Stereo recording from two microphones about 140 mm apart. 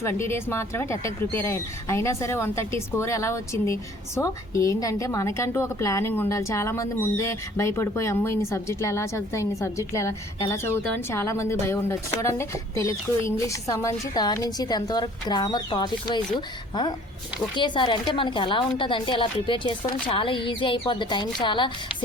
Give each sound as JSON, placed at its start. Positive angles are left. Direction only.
{"t": 0.0, "sound": "speech", "side_deg": 20}
{"t": 17.5, "sound": "speech", "side_deg": 35}